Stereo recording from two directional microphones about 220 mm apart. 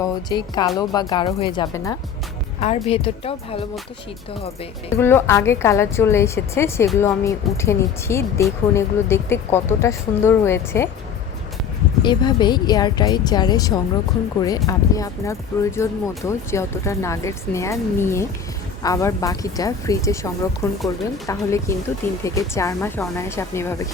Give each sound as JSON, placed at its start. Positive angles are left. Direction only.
{"t": 0.0, "sound": "a woman's voice", "side_deg": 20}
{"t": 2.6, "sound": "a woman's voice", "side_deg": 30}
{"t": 4.9, "sound": "a woman's voice", "side_deg": 10}
{"t": 12.0, "sound": "a woman's voice", "side_deg": 20}